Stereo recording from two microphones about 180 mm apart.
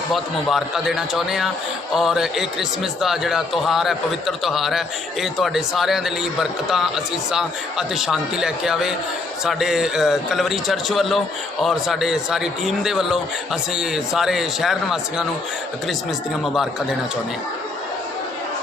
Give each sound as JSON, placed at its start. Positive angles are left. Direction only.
{"t": 0.1, "sound": "a man's voice", "side_deg": 0}